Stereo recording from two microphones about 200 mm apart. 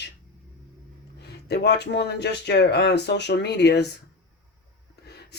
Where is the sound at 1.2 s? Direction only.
55° left (ahead or behind).